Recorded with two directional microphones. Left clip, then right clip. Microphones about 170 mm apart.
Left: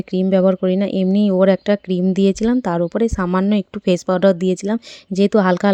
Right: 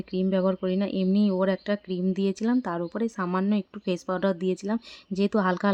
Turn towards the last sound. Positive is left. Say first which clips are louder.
# left 10 dB
turn(degrees=40)  # may be behind; listen again after turning